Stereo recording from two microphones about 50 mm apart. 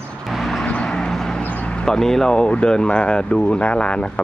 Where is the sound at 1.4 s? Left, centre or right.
Left.